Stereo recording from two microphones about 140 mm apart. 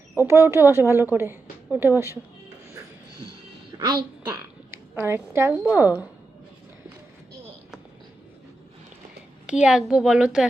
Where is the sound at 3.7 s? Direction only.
35° right (ahead or behind).